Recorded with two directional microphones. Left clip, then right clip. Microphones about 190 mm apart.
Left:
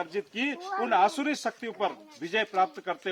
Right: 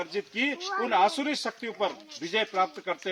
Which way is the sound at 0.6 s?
50° left (ahead or behind).